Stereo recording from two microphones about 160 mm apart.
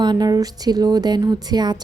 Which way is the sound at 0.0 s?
25° right (ahead or behind).